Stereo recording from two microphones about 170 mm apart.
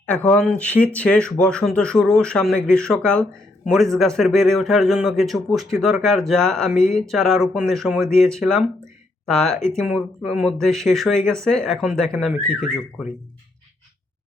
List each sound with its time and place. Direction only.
0.0 s a man's voice: 10° left (ahead or behind)